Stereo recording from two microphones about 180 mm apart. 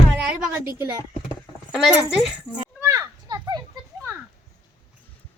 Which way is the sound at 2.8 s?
15° right (ahead or behind).